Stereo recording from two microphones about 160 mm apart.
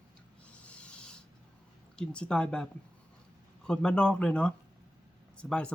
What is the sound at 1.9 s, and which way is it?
Speech, 5° left (ahead or behind).